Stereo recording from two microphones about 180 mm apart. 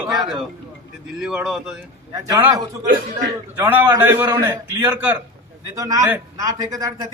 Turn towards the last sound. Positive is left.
turn(degrees=-20)  # may be behind; listen again after turning